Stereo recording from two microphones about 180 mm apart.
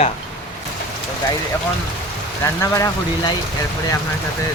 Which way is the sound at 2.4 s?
15° left (ahead or behind).